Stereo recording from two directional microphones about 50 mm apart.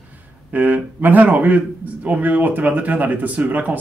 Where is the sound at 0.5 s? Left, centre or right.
Right.